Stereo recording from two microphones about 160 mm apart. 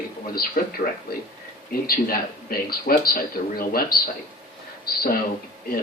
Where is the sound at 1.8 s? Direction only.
70° left (ahead or behind).